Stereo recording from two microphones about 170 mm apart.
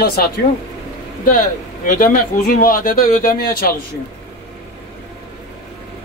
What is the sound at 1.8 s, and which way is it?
Speech, 55° left (ahead or behind).